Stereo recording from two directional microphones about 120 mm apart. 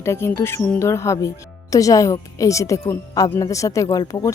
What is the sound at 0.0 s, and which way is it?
Speech, 20° left (ahead or behind).